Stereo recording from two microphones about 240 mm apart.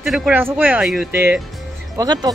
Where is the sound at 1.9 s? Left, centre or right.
Centre.